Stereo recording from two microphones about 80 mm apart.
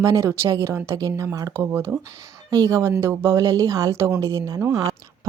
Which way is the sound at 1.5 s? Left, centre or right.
Right.